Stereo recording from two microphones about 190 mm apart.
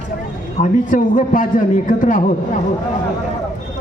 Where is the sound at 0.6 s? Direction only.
45° left (ahead or behind).